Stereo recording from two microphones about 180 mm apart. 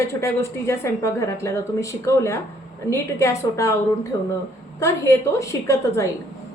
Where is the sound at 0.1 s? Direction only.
15° left (ahead or behind).